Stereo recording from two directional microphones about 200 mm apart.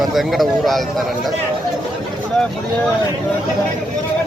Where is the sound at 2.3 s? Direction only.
5° left (ahead or behind).